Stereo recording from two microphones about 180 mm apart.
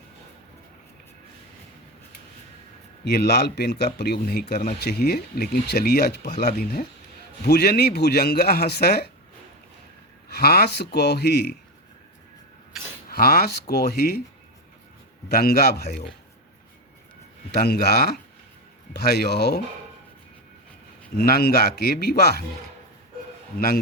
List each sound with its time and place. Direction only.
3.0 s speech: 65° left (ahead or behind)
10.2 s speech: 60° left (ahead or behind)
13.1 s speech: 60° left (ahead or behind)
15.3 s speech: 60° left (ahead or behind)
17.5 s speech: 60° left (ahead or behind)
21.2 s speech: 60° left (ahead or behind)
23.6 s speech: 55° left (ahead or behind)